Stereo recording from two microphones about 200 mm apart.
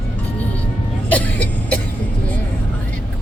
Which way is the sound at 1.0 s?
5° left (ahead or behind).